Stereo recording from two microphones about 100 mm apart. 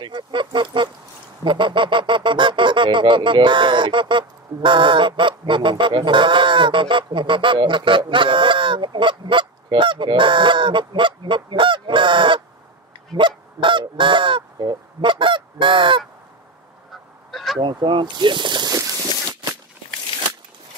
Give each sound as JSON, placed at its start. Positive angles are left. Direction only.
{"t": 0.0, "sound": "duck", "side_deg": -55}
{"t": 1.4, "sound": "speech", "side_deg": -55}
{"t": 8.1, "sound": "goose", "side_deg": -55}
{"t": 17.3, "sound": "a sound", "side_deg": 0}
{"t": 17.6, "sound": "speech", "side_deg": -50}
{"t": 20.1, "sound": "crunch", "side_deg": 65}